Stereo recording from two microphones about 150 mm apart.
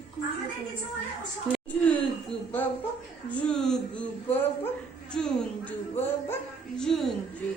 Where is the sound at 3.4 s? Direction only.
5° left (ahead or behind).